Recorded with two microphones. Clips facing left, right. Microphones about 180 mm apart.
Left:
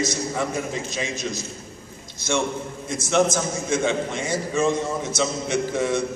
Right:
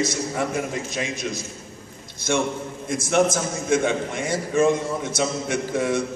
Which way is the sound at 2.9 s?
55° right (ahead or behind).